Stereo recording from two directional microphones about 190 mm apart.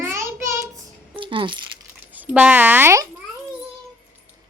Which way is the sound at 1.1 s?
25° right (ahead or behind).